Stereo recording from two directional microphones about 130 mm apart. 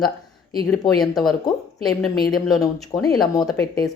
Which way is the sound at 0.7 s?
Centre (ahead or behind).